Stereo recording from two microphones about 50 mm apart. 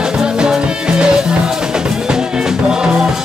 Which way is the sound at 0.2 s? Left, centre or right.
Centre.